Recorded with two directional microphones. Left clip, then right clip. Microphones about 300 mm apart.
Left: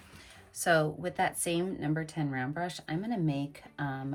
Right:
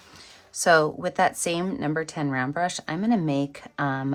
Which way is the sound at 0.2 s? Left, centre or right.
Centre.